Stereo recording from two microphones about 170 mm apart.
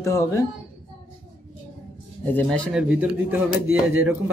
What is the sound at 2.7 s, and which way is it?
Speech, 5° right (ahead or behind).